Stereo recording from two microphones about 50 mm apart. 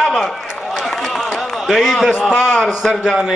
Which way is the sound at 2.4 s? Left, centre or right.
Centre.